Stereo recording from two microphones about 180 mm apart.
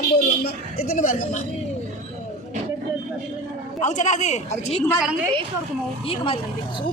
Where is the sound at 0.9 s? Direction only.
45° left (ahead or behind).